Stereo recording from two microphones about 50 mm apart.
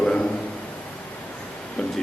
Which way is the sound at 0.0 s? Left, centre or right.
Centre.